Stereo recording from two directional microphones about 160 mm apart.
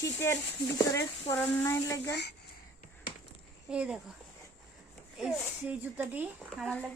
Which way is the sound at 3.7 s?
5° right (ahead or behind).